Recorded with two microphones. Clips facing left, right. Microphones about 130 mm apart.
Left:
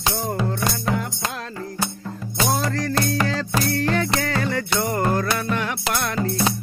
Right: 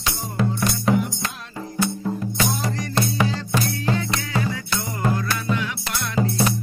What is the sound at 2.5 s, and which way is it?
Music, 90° left.